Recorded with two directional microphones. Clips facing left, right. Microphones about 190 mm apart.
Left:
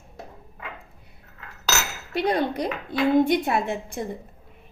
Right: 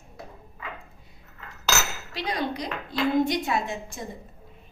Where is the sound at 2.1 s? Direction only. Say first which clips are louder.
Left 6 dB; 55° left (ahead or behind).